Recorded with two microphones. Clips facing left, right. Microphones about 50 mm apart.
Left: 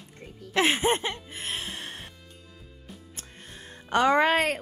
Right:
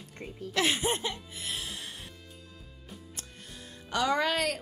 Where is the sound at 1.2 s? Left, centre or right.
Left.